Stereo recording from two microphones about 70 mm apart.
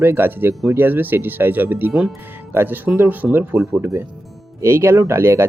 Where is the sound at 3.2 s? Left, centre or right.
Centre.